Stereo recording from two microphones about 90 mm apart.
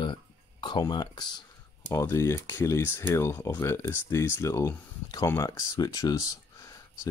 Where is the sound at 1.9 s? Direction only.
35° left (ahead or behind).